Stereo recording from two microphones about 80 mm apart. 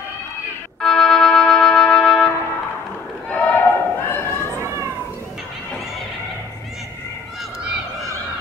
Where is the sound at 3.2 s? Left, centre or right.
Centre; by 4.4 s left.